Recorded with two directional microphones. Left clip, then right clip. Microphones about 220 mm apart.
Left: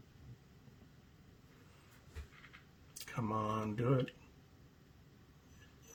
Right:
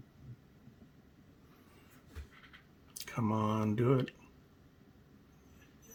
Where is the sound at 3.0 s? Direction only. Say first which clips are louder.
Right 3 dB; 50° right (ahead or behind).